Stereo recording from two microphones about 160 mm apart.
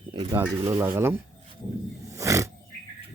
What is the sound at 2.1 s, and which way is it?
Roaring cats, 20° right (ahead or behind).